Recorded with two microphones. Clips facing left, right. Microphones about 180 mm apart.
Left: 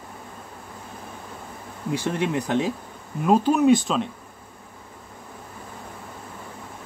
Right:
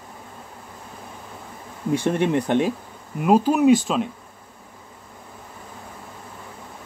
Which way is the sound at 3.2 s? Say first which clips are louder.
Right 1 dB; 5° right (ahead or behind).